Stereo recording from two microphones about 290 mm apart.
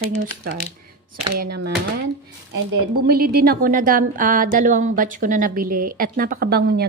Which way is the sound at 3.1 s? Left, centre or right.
Right.